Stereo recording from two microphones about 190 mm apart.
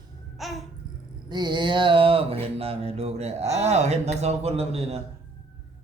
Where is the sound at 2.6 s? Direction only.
30° right (ahead or behind).